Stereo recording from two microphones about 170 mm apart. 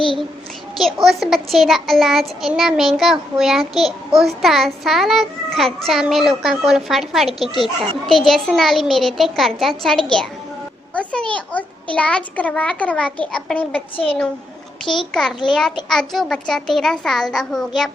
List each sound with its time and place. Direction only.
0.8 s a child's voice: centre (ahead or behind)
13.9 s a child's voice: 30° left (ahead or behind)
15.1 s a child's voice: 5° left (ahead or behind)